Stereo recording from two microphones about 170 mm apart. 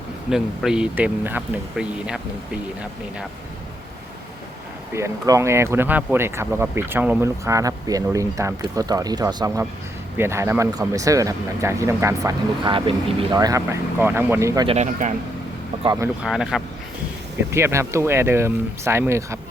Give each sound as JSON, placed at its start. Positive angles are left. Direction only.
{"t": 0.3, "sound": "speech", "side_deg": -5}
{"t": 4.9, "sound": "speech", "side_deg": -20}
{"t": 14.7, "sound": "speech", "side_deg": -45}
{"t": 16.2, "sound": "speech", "side_deg": -5}
{"t": 17.5, "sound": "speech", "side_deg": -15}